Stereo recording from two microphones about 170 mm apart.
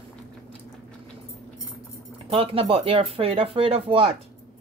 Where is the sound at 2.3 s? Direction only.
35° right (ahead or behind).